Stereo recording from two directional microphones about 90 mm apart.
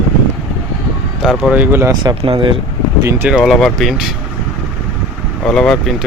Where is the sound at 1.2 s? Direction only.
5° right (ahead or behind).